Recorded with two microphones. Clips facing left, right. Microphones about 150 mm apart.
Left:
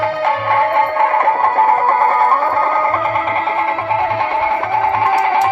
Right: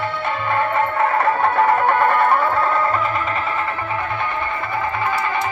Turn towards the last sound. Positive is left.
turn(degrees=80)